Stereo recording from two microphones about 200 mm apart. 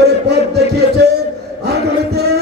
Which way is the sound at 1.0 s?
55° right (ahead or behind).